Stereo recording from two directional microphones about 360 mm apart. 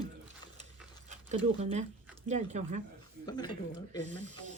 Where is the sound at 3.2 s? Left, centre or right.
Centre.